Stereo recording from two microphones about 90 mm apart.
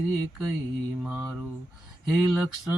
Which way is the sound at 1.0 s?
15° right (ahead or behind).